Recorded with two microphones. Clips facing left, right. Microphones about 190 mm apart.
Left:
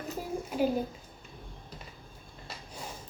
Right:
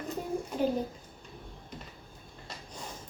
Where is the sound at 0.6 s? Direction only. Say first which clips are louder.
Left 1 dB; 5° left (ahead or behind).